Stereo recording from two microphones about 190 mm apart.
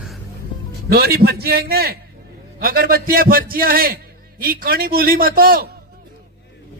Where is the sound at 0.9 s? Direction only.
55° right (ahead or behind).